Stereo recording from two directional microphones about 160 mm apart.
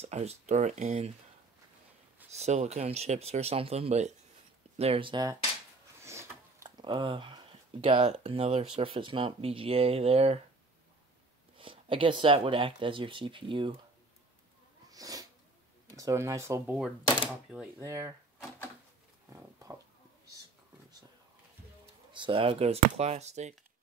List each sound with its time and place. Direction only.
0.0 s speech: 40° right (ahead or behind)
2.3 s speech: 45° right (ahead or behind); by 5.4 s 25° right (ahead or behind)
5.9 s a sound: 15° right (ahead or behind)
6.9 s speech: 30° right (ahead or behind)
11.5 s speech: 35° right (ahead or behind)
14.9 s sneeze: 20° right (ahead or behind)
16.0 s speech: 20° right (ahead or behind)
17.7 s speech: 20° right (ahead or behind)
19.2 s a sound: 20° right (ahead or behind)
22.1 s speech: 30° right (ahead or behind)